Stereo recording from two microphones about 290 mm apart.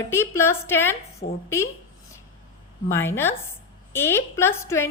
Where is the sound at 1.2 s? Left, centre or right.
Left.